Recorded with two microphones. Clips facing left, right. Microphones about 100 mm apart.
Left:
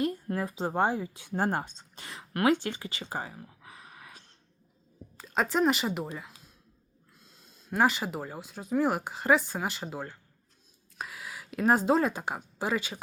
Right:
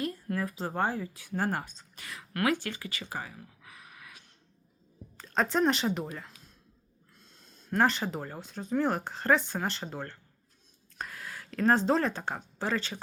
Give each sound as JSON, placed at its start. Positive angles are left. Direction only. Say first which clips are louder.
{"t": 0.0, "sound": "speech", "louder": "left 3 dB", "side_deg": 25}
{"t": 5.1, "sound": "speech", "louder": "even", "side_deg": 5}
{"t": 7.7, "sound": "speech", "louder": "left 1 dB", "side_deg": 5}